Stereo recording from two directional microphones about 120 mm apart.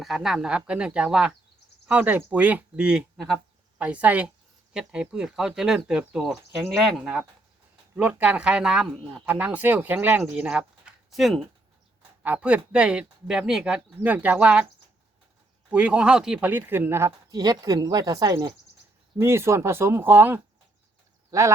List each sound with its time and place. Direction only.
0.0 s speech: 5° right (ahead or behind)
9.2 s speech: 15° right (ahead or behind)
12.2 s speech: 10° right (ahead or behind)
15.7 s speech: 10° right (ahead or behind)
17.3 s speech: 35° right (ahead or behind); by 20.4 s 15° right (ahead or behind)
21.2 s a sound: 25° right (ahead or behind)